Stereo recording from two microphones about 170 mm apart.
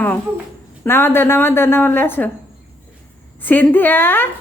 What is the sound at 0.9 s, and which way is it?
A woman's voice, 15° left (ahead or behind).